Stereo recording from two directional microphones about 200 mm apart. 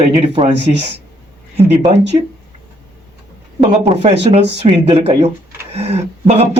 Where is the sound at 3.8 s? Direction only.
30° right (ahead or behind).